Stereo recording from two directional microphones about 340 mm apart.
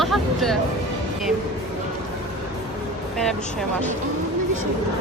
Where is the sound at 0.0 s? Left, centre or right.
Centre.